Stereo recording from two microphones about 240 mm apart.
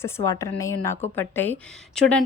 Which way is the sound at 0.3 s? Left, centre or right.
Centre.